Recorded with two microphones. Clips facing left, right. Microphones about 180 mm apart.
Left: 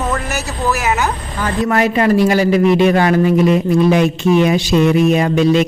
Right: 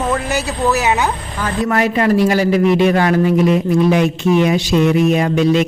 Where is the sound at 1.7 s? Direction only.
20° left (ahead or behind).